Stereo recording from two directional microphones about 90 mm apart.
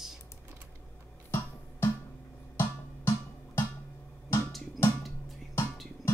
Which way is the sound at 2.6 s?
30° left (ahead or behind).